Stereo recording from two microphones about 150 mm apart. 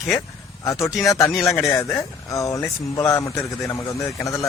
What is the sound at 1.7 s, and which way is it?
Speech, 20° left (ahead or behind).